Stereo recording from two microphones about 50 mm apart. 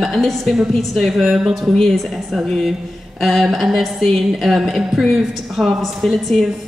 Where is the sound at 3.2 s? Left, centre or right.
Centre.